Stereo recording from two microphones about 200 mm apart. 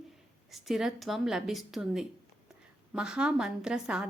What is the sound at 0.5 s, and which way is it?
A woman's voice, centre (ahead or behind).